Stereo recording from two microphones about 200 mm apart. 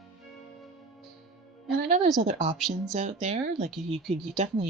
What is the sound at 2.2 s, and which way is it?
Speech, 35° right (ahead or behind).